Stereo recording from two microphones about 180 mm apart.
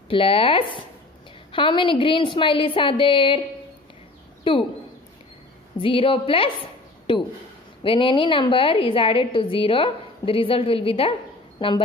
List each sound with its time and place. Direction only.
0.1 s a woman's voice: 30° left (ahead or behind)
4.5 s a woman's voice: 30° left (ahead or behind)
5.8 s a woman's voice: 30° left (ahead or behind)
7.8 s a woman's voice: 30° left (ahead or behind)